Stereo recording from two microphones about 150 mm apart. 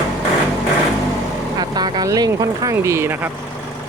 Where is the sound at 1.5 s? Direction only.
25° right (ahead or behind).